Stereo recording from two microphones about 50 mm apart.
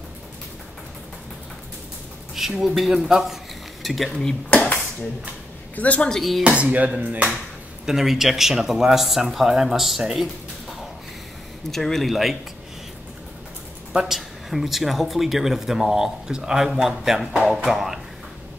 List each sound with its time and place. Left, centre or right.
2.6 s speech: centre
4.5 s dishes: left
5.8 s a woman's voice: left
6.0 s speech: centre
6.4 s speech: right
7.8 s speech: centre
13.9 s speech: centre